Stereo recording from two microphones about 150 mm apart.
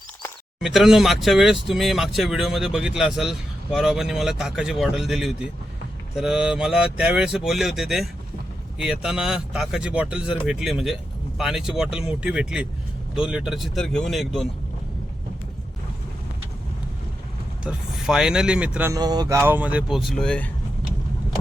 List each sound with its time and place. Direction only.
0.6 s speech: centre (ahead or behind)
17.6 s speech: 5° right (ahead or behind)
18.9 s speech: 25° right (ahead or behind)
19.4 s speech: 10° right (ahead or behind)
20.0 s speech: 5° left (ahead or behind)